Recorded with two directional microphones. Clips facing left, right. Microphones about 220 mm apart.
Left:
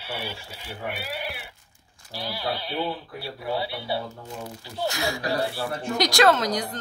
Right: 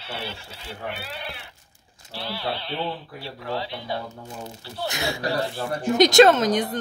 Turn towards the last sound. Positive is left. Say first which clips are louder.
# right 4 dB
turn(degrees=-20)  # may be behind; listen again after turning